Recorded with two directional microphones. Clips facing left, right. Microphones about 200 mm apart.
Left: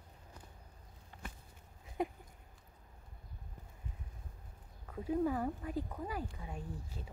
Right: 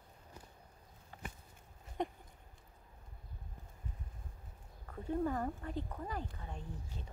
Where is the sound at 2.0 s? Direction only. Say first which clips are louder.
Left 2 dB; 5° left (ahead or behind).